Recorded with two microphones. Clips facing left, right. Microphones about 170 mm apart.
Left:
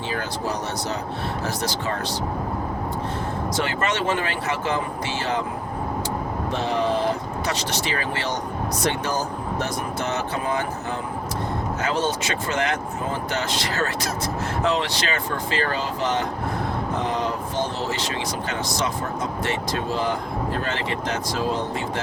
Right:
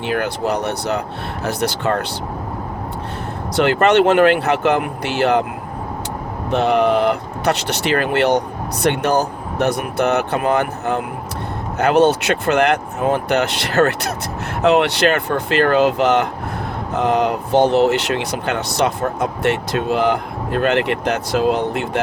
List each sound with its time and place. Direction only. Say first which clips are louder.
0.1 s speech: right 9 dB; 65° right (ahead or behind)
3.5 s speech: right 13 dB; 65° right (ahead or behind)
6.5 s speech: right 9 dB; 65° right (ahead or behind)